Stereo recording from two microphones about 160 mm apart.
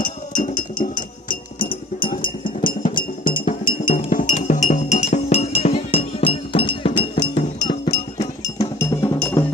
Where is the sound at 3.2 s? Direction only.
55° left (ahead or behind); by 9.1 s 20° left (ahead or behind).